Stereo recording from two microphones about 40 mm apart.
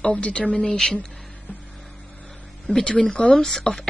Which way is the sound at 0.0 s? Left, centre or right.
Left.